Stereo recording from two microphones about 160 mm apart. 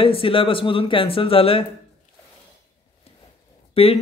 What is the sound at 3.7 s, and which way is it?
Speech, 35° left (ahead or behind).